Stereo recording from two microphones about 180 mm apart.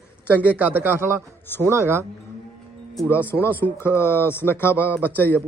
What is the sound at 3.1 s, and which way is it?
Speech, 10° left (ahead or behind).